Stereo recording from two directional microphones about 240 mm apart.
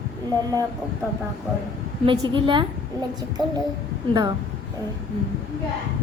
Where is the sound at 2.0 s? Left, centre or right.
Centre.